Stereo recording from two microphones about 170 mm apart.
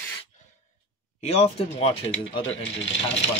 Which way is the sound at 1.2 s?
35° left (ahead or behind).